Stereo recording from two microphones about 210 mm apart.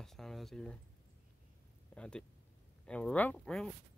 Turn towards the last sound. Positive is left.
turn(degrees=5)  # may be behind; listen again after turning